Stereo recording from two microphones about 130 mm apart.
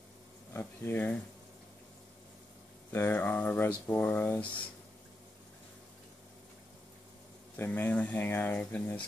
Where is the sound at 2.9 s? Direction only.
15° left (ahead or behind).